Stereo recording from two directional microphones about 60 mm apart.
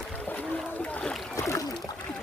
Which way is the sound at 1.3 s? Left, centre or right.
Left.